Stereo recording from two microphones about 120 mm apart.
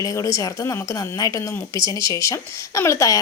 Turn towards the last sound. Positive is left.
turn(degrees=25)  # may be behind; listen again after turning